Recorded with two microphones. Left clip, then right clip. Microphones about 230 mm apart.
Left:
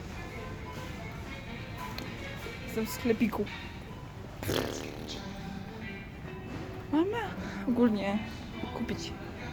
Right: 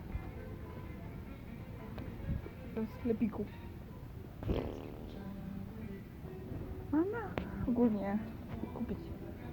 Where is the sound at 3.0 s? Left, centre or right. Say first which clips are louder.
Left 7 dB; left.